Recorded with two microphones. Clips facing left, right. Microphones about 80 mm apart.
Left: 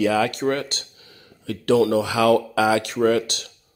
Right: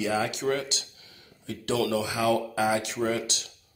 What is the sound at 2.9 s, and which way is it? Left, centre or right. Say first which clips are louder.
Speech: left 9 dB; left.